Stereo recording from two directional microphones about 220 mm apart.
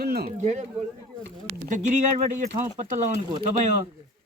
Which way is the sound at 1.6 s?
35° right (ahead or behind).